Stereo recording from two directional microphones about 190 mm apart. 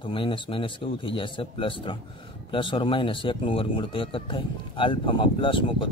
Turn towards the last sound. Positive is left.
turn(degrees=25)  # may be behind; listen again after turning